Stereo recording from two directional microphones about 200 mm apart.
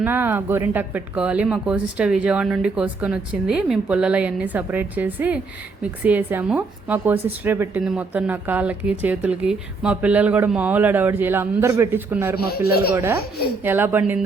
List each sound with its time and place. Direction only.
0.0 s speech: 10° right (ahead or behind)
12.4 s a man's voice: 50° left (ahead or behind)
12.9 s speech: 15° right (ahead or behind)